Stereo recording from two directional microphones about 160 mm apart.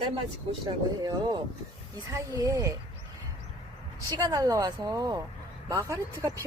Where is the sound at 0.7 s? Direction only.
25° right (ahead or behind).